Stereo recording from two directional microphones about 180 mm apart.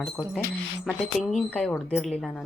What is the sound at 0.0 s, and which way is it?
Speech, 5° left (ahead or behind).